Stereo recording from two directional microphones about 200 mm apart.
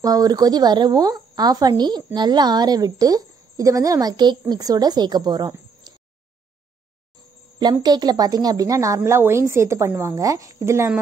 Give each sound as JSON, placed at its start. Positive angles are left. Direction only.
{"t": 0.0, "sound": "a woman's voice", "side_deg": -20}
{"t": 7.8, "sound": "a woman's voice", "side_deg": -20}